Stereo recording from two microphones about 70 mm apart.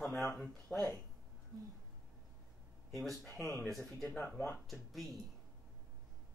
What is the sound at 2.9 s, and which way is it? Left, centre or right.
Speech, centre.